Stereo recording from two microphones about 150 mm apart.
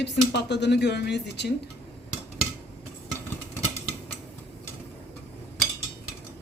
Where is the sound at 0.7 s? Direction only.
90° left.